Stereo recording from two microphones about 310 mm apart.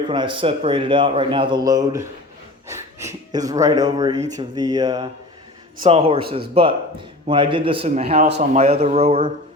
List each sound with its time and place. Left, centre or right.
0.1 s speech: centre